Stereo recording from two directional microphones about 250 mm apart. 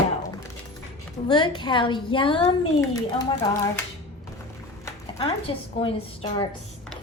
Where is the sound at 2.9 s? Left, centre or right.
Centre.